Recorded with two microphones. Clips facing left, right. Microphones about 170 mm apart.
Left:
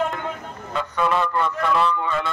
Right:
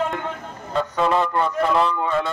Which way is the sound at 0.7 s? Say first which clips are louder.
Right 2 dB; 30° right (ahead or behind).